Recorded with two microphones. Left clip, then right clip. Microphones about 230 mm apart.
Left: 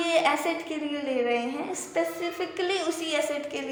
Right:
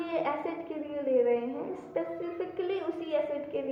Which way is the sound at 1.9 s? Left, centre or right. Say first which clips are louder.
Left 6 dB; left.